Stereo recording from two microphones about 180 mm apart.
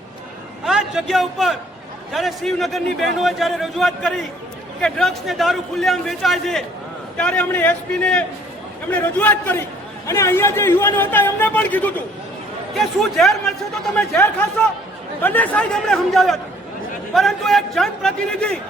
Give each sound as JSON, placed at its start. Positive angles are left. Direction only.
{"t": 0.6, "sound": "a man's voice", "side_deg": -5}